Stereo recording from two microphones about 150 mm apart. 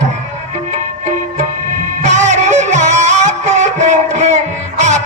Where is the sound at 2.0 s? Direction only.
50° right (ahead or behind).